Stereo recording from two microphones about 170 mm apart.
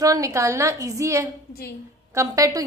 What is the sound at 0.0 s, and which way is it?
A woman's voice, 20° right (ahead or behind).